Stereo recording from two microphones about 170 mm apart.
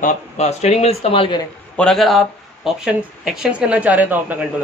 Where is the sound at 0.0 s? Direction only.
40° left (ahead or behind).